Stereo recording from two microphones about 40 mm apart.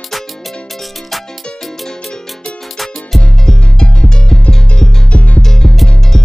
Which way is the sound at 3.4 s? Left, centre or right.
Centre.